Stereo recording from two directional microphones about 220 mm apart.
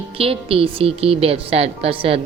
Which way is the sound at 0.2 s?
25° right (ahead or behind).